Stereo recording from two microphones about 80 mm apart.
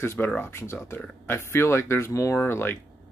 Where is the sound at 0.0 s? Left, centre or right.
Left.